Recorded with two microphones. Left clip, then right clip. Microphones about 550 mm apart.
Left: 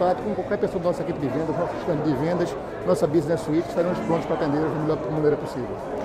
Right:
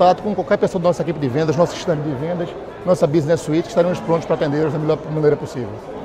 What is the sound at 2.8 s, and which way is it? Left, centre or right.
Speech, right.